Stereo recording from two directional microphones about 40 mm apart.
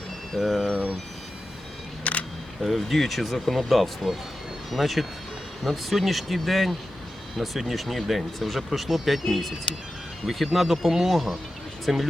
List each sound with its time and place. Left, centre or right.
0.3 s speech: centre
2.1 s single-lens reflex camera: left
2.6 s speech: centre